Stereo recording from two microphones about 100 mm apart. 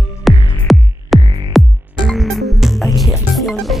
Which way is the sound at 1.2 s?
60° right (ahead or behind).